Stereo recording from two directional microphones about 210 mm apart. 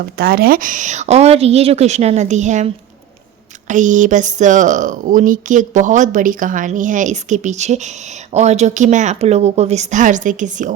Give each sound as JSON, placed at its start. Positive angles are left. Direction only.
{"t": 0.2, "sound": "speech", "side_deg": -45}